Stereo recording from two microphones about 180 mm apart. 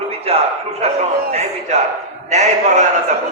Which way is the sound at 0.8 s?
35° right (ahead or behind).